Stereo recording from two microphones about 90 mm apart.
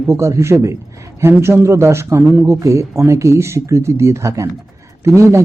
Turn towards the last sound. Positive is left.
turn(degrees=-30)  # may be behind; listen again after turning